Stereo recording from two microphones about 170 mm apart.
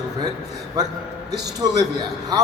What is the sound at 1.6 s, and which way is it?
Speech, 20° right (ahead or behind).